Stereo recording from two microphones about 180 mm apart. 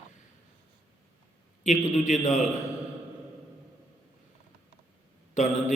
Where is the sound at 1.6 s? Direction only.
40° left (ahead or behind).